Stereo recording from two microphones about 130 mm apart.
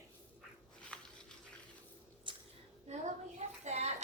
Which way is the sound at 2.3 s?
40° right (ahead or behind).